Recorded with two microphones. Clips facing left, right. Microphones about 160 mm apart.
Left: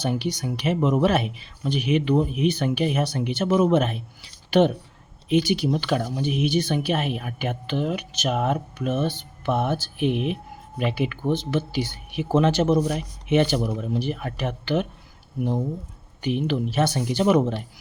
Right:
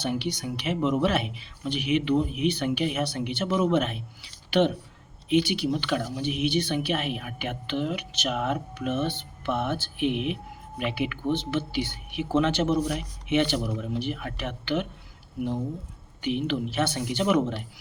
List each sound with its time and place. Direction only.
0.0 s speech: 40° left (ahead or behind)
16.2 s speech: 40° left (ahead or behind)